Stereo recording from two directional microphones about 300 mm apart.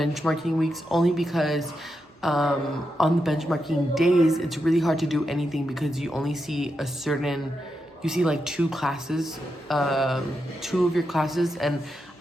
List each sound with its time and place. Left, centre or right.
0.0 s a woman's voice: centre